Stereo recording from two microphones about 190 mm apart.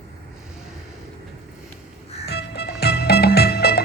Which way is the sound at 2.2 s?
60° left (ahead or behind).